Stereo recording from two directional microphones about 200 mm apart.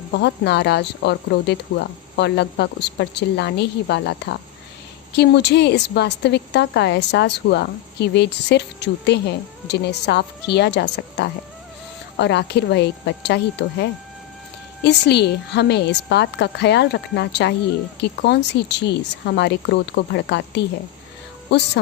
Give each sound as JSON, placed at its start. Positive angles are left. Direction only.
{"t": 0.1, "sound": "a woman's voice", "side_deg": 60}
{"t": 14.8, "sound": "a woman's voice", "side_deg": 55}